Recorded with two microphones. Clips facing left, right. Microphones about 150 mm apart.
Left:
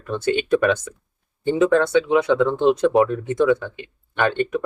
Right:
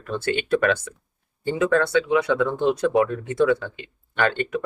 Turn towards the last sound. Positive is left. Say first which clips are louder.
# left 2 dB
turn(degrees=20)  # may be behind; listen again after turning